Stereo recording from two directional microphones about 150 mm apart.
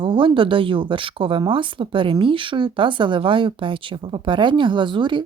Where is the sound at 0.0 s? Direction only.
35° right (ahead or behind).